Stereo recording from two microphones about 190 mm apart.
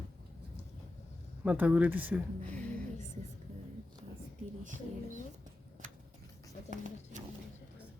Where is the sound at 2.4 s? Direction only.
5° left (ahead or behind).